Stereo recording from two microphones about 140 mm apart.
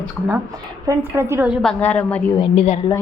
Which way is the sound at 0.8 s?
20° right (ahead or behind).